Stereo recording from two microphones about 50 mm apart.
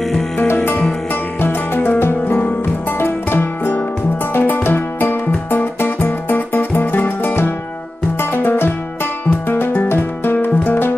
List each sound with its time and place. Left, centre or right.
1.4 s music: left